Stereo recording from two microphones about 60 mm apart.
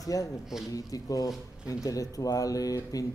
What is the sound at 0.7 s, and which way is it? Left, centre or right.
Speech, left.